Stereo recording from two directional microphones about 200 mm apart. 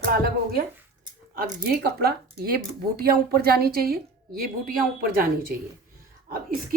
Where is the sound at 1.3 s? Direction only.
45° right (ahead or behind).